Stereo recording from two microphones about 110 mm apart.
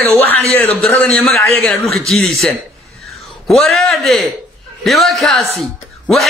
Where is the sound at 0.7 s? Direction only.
5° left (ahead or behind).